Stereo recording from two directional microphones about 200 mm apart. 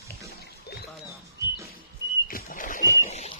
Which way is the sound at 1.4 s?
15° right (ahead or behind).